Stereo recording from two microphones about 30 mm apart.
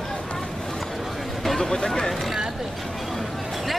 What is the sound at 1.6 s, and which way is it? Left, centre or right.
Speech, centre.